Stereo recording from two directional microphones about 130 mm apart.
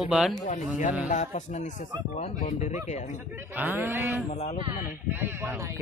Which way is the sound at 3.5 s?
15° right (ahead or behind).